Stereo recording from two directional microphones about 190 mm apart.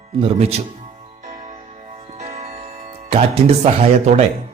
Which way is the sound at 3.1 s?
35° right (ahead or behind).